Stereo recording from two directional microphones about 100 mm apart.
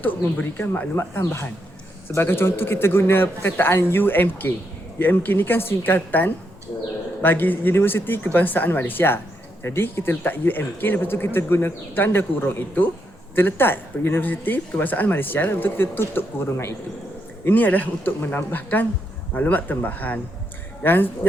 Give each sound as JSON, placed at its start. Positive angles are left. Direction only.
{"t": 0.5, "sound": "a man's voice", "side_deg": 20}